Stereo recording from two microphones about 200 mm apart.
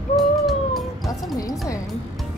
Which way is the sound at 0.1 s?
Centre (ahead or behind).